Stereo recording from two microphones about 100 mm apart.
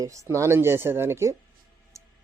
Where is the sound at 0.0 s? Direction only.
30° right (ahead or behind).